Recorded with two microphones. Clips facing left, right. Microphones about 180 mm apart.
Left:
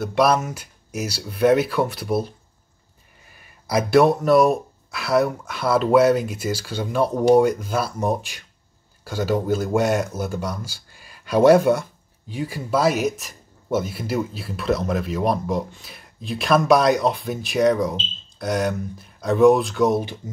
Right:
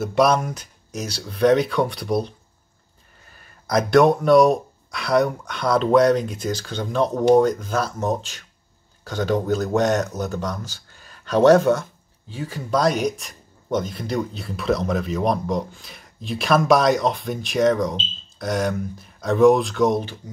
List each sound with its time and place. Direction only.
0.0 s speech: centre (ahead or behind)